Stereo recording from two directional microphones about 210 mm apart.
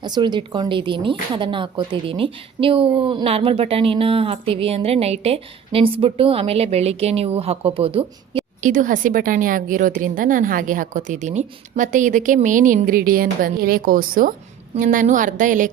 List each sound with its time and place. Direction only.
0.0 s speech: 20° right (ahead or behind)
8.6 s a woman's voice: 40° right (ahead or behind)